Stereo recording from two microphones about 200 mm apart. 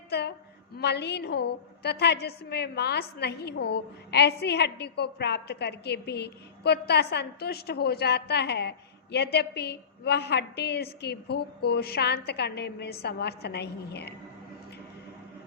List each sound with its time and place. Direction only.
0.1 s a woman's voice: 55° left (ahead or behind)